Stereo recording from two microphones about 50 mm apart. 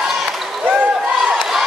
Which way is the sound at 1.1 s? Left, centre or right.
Centre.